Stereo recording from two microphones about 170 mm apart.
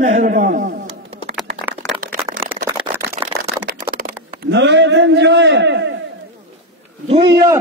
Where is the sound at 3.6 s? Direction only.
60° right (ahead or behind); by 5.9 s 90° right.